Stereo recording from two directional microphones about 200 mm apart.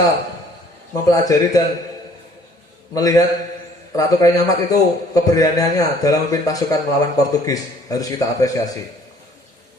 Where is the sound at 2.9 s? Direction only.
15° left (ahead or behind).